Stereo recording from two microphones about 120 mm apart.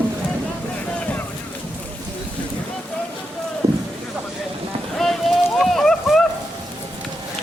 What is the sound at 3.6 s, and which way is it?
Boat, 25° right (ahead or behind).